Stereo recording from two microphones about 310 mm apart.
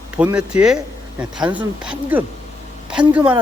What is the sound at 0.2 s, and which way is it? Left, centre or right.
Speech, centre.